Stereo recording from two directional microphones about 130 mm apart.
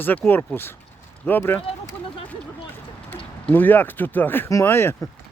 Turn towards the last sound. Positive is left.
turn(degrees=15)  # may be behind; listen again after turning